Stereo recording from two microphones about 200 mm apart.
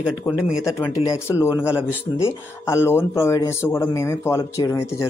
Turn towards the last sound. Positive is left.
turn(degrees=15)  # may be behind; listen again after turning